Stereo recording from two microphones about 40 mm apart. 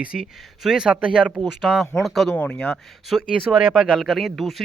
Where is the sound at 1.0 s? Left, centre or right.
Right.